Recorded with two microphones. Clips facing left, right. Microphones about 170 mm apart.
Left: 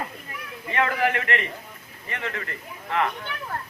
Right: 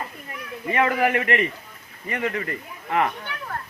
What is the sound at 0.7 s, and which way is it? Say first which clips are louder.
Speech: right 3 dB; 20° right (ahead or behind).